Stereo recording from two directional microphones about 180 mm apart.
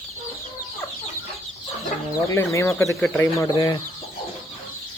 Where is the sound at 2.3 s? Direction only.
15° left (ahead or behind).